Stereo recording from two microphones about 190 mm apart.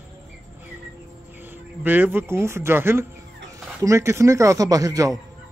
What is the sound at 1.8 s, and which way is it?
A man's voice, 10° right (ahead or behind).